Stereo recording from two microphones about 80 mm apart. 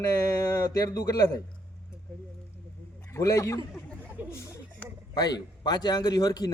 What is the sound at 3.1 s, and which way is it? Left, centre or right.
Speech, left.